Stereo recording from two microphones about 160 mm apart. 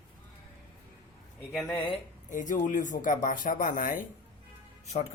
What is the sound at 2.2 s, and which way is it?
Speech, 55° left (ahead or behind).